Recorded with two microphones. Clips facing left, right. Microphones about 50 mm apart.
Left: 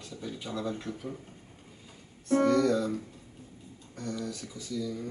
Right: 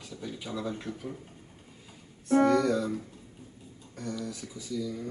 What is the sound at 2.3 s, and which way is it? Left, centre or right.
Speech, centre.